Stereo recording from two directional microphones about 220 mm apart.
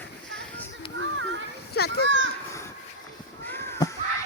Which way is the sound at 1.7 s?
45° left (ahead or behind).